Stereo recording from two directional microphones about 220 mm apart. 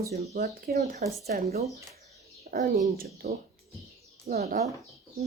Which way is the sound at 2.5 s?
40° right (ahead or behind).